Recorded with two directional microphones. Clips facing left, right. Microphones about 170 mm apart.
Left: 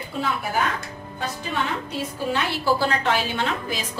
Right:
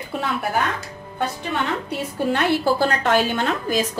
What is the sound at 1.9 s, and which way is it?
A woman's voice, 60° right (ahead or behind).